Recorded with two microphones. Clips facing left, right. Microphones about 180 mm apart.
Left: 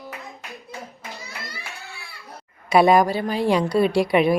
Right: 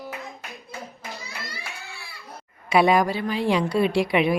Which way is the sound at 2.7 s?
40° left (ahead or behind).